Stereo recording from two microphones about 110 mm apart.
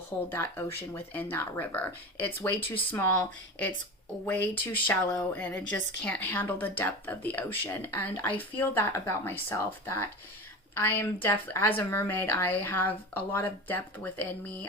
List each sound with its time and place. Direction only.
0.3 s a woman's voice: 20° left (ahead or behind)